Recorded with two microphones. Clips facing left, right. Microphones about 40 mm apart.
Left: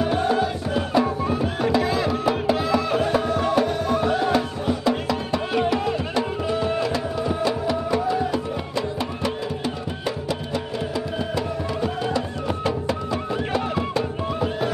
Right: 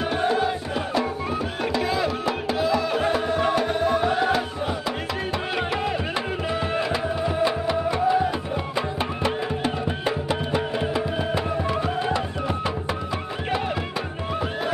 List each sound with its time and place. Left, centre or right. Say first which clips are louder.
1.7 s music: left 2 dB; centre